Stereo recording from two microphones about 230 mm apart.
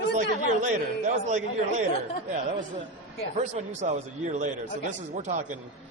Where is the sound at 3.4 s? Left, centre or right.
Right.